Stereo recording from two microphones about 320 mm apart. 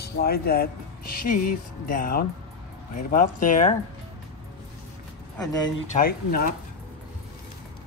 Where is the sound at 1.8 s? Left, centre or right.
Left.